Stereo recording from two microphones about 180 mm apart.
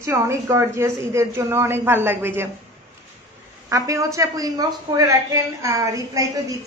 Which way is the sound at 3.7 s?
20° right (ahead or behind).